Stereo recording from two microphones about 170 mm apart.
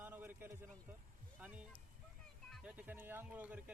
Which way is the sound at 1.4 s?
10° right (ahead or behind).